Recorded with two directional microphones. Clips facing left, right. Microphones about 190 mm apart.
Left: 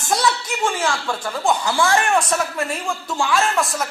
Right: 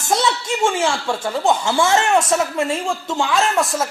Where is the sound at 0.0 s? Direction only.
20° right (ahead or behind).